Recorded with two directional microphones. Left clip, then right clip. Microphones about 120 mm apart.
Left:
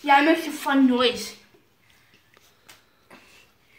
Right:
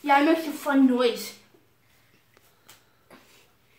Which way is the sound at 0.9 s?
15° right (ahead or behind).